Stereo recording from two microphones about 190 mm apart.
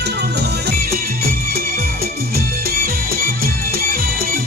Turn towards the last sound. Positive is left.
turn(degrees=-50)  # may be behind; listen again after turning